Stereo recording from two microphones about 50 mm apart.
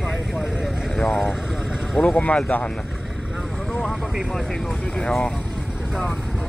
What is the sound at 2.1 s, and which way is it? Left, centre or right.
Speech, left.